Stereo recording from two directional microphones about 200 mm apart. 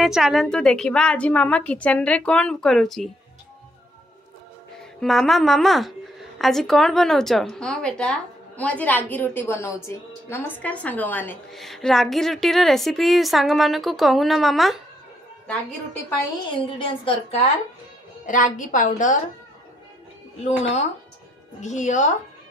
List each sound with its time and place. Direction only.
0.0 s a woman's voice: centre (ahead or behind)
5.0 s a woman's voice: centre (ahead or behind)
16.4 s a woman's voice: 25° left (ahead or behind)
18.2 s a woman's voice: 40° left (ahead or behind)
21.5 s a woman's voice: 35° left (ahead or behind)